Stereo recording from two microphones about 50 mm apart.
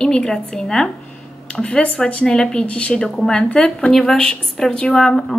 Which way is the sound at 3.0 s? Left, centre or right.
Centre.